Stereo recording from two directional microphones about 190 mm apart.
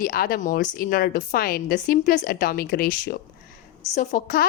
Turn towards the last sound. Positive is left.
turn(degrees=45)  # may be behind; listen again after turning